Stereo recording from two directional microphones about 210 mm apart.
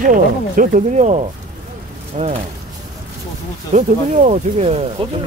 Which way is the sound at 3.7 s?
35° right (ahead or behind).